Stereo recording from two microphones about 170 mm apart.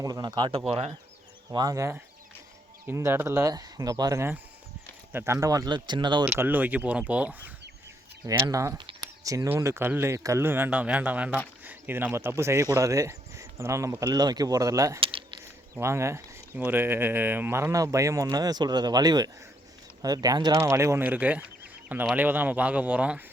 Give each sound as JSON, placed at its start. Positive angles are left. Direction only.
{"t": 0.0, "sound": "speech", "side_deg": -25}
{"t": 1.5, "sound": "speech", "side_deg": -20}
{"t": 6.2, "sound": "speech", "side_deg": -10}
{"t": 8.3, "sound": "speech", "side_deg": -20}
{"t": 15.0, "sound": "keys jangling", "side_deg": -30}
{"t": 15.7, "sound": "speech", "side_deg": -15}